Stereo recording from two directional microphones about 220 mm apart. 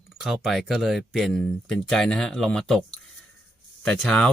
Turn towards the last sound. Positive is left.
turn(degrees=0)  # may be behind; listen again after turning